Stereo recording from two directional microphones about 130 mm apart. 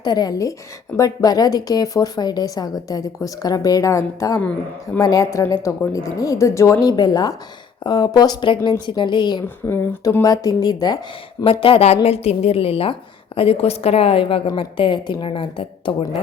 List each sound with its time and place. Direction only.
0.0 s a woman's voice: 30° left (ahead or behind)
9.6 s speech: 20° left (ahead or behind)
10.2 s a woman's voice: 30° left (ahead or behind)
11.6 s a woman's voice: 50° left (ahead or behind)